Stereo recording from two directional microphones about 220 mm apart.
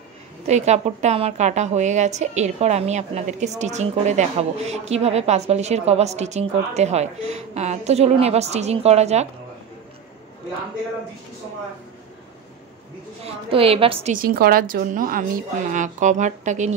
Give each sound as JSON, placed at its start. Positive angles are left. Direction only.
{"t": 0.5, "sound": "a woman's voice", "side_deg": -30}
{"t": 13.2, "sound": "a woman's voice", "side_deg": -25}
{"t": 14.1, "sound": "a woman's voice", "side_deg": -40}